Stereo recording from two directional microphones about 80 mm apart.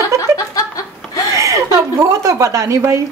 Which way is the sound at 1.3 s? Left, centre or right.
Right.